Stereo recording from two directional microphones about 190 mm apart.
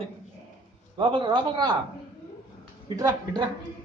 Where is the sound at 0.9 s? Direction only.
25° right (ahead or behind).